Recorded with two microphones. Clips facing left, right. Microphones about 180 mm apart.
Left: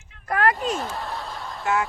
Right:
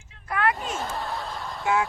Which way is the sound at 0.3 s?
40° left (ahead or behind).